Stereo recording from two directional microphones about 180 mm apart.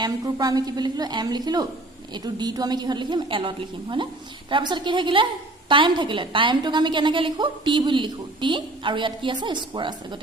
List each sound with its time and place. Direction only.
0.0 s a woman's voice: 20° right (ahead or behind)